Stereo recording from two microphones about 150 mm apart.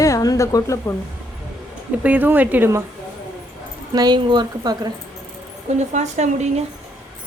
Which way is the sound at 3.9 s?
30° right (ahead or behind).